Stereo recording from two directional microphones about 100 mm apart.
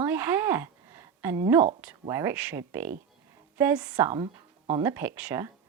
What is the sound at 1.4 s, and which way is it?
Speech, 30° right (ahead or behind).